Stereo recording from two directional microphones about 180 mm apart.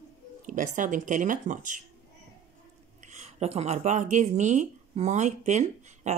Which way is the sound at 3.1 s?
35° right (ahead or behind).